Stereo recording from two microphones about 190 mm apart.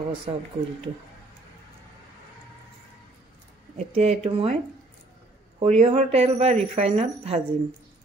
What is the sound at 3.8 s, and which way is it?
Speech, 35° right (ahead or behind).